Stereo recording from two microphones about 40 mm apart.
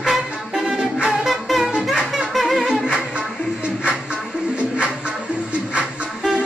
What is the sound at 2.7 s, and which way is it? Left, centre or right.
Music, centre.